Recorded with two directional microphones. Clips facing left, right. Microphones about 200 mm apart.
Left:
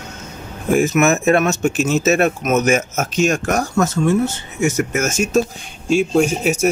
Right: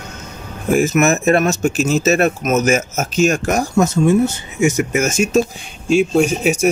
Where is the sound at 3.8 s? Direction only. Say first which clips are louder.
Right 4 dB; 15° right (ahead or behind).